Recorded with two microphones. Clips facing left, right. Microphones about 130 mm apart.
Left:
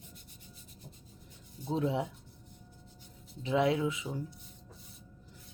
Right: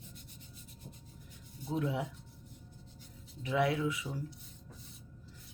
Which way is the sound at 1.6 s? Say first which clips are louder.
Left 3 dB; 25° left (ahead or behind).